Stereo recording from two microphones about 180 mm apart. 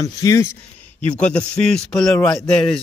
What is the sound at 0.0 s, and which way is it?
Speech, 20° left (ahead or behind).